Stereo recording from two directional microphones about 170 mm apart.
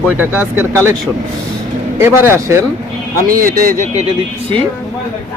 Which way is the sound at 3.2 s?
55° right (ahead or behind).